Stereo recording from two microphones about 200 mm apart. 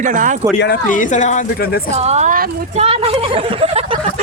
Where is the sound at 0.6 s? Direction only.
45° left (ahead or behind).